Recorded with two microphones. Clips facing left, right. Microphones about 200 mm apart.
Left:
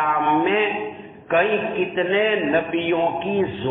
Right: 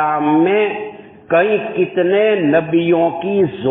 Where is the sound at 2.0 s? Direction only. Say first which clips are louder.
Right 8 dB; 50° right (ahead or behind).